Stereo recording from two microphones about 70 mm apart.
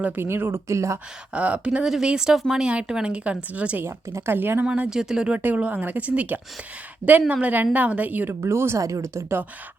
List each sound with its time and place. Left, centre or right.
0.2 s a woman's voice: right
0.7 s speech: right
1.3 s speech: centre
3.8 s a woman's voice: right
4.9 s speech: centre
5.4 s speech: right
8.3 s a woman's voice: right
8.8 s speech: right